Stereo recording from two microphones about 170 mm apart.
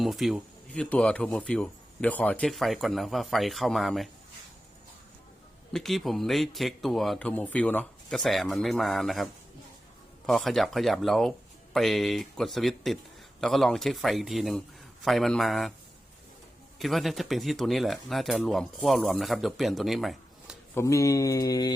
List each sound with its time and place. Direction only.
0.0 s speech: centre (ahead or behind)
5.7 s speech: centre (ahead or behind)
16.7 s speech: centre (ahead or behind)
20.7 s a sound: 20° left (ahead or behind)